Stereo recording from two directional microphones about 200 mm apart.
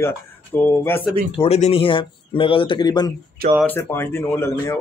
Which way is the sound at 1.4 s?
30° left (ahead or behind).